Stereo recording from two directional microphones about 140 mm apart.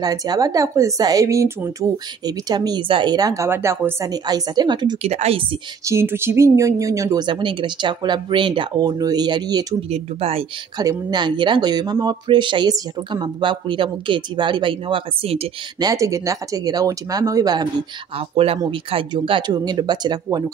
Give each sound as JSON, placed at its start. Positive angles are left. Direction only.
{"t": 0.0, "sound": "speech", "side_deg": -25}
{"t": 5.0, "sound": "a woman's voice", "side_deg": -50}
{"t": 5.9, "sound": "speech", "side_deg": -20}
{"t": 9.8, "sound": "a woman's voice", "side_deg": -50}
{"t": 10.8, "sound": "speech", "side_deg": -30}
{"t": 15.8, "sound": "speech", "side_deg": -25}
{"t": 18.1, "sound": "a woman's voice", "side_deg": -45}